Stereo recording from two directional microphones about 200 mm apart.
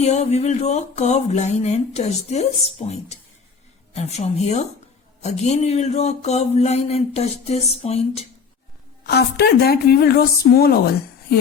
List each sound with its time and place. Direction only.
0.0 s speech: 35° left (ahead or behind)
9.0 s a woman's voice: 55° left (ahead or behind)